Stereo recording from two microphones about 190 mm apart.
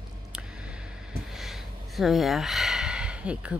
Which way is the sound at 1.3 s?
Centre (ahead or behind).